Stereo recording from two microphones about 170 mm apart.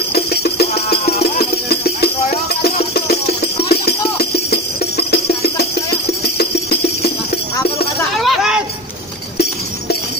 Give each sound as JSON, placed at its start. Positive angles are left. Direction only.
{"t": 0.1, "sound": "music", "side_deg": 70}
{"t": 3.7, "sound": "music", "side_deg": 70}
{"t": 8.2, "sound": "hubbub", "side_deg": 0}